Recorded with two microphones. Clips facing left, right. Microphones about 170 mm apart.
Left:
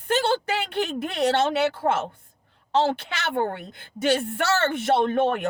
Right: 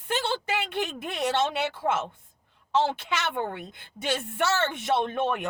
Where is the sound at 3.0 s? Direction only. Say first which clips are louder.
Left 2 dB; 35° left (ahead or behind).